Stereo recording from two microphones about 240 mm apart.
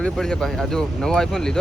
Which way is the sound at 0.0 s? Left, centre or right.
Centre.